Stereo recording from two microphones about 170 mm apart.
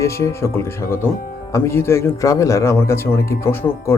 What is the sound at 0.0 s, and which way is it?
Speech, 15° left (ahead or behind).